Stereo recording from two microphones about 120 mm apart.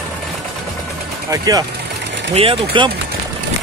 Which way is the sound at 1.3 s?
30° right (ahead or behind).